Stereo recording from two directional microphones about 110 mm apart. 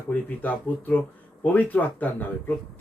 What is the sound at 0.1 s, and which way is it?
A man's voice, 15° left (ahead or behind).